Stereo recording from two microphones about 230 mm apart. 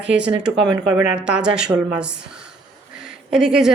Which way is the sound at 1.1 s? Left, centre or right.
Centre.